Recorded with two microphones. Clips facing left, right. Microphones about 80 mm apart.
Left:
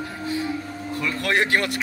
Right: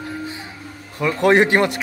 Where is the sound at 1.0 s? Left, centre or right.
Right.